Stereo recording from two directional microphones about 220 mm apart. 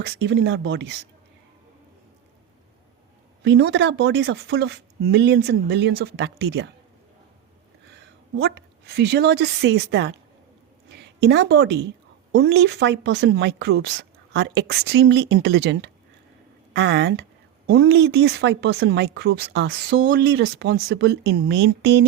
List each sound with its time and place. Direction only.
0.0 s speech: 50° right (ahead or behind)
3.4 s speech: 50° right (ahead or behind)
8.4 s speech: 50° right (ahead or behind)
10.9 s a sound: 50° right (ahead or behind)
12.3 s speech: 50° right (ahead or behind)